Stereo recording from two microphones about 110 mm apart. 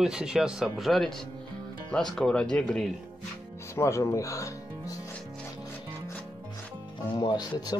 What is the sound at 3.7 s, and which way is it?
Speech, 25° left (ahead or behind).